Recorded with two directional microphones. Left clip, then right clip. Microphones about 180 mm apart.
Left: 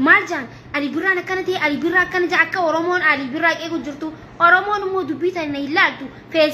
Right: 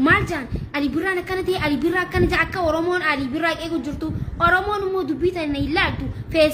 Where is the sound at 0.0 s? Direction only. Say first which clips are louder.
Left 4 dB; 35° right (ahead or behind).